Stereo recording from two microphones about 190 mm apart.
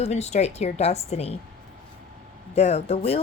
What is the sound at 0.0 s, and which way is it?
A woman's voice, 35° left (ahead or behind).